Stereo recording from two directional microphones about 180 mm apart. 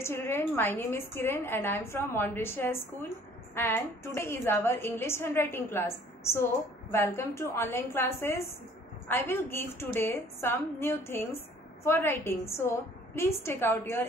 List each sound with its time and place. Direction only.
0.0 s a woman's voice: 15° left (ahead or behind)